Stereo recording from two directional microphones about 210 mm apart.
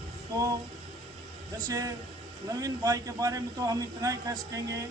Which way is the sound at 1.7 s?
15° right (ahead or behind).